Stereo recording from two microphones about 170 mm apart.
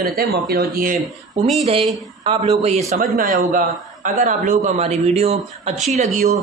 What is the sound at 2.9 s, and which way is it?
A man's voice, 50° right (ahead or behind).